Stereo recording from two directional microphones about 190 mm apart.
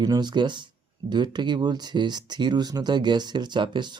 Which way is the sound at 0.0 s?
20° right (ahead or behind).